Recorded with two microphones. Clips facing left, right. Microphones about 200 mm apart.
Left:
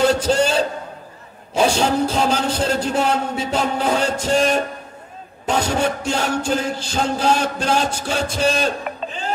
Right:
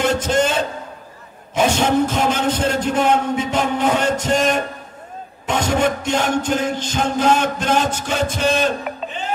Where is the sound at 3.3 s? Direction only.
35° left (ahead or behind).